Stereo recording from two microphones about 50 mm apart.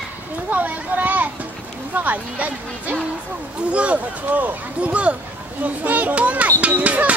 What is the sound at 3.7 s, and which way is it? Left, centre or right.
A child's voice, right.